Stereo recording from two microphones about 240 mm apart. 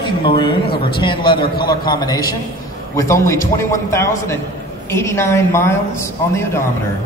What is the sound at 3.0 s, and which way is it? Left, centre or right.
A man's voice, centre.